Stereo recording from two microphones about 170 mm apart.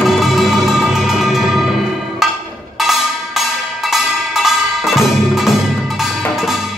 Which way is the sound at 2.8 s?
Centre (ahead or behind).